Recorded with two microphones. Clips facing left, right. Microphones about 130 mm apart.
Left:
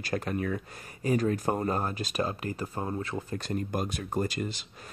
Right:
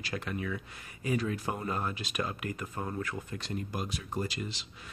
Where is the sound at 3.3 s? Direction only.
45° left (ahead or behind).